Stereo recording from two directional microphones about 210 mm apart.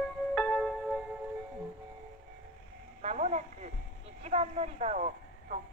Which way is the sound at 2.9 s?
35° right (ahead or behind).